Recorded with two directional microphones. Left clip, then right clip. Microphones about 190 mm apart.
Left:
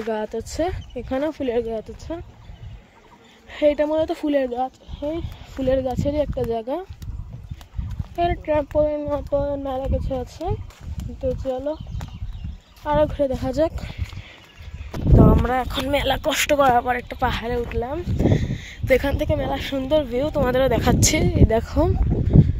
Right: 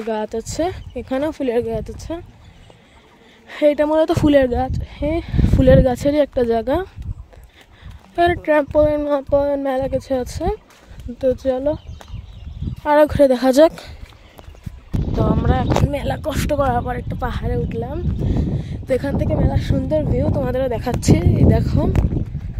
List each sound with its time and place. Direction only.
0.1 s speech: 25° right (ahead or behind)
3.4 s speech: 35° right (ahead or behind); by 6.9 s 55° right (ahead or behind)
8.2 s speech: 50° right (ahead or behind)
12.8 s speech: 55° right (ahead or behind)
15.4 s speech: 5° left (ahead or behind)
16.7 s speech: centre (ahead or behind)
17.1 s speech: 10° right (ahead or behind)
20.4 s speech: 5° right (ahead or behind)
21.3 s speech: 10° left (ahead or behind)